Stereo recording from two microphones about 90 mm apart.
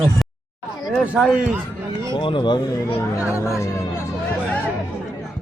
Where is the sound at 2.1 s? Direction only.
65° left (ahead or behind).